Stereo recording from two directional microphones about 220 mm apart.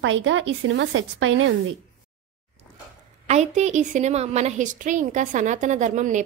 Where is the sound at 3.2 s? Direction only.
30° right (ahead or behind).